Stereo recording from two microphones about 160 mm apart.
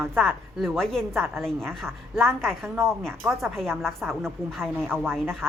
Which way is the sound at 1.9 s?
15° right (ahead or behind).